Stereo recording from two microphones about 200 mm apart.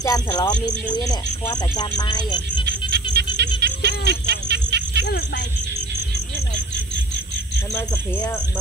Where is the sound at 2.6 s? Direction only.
55° right (ahead or behind).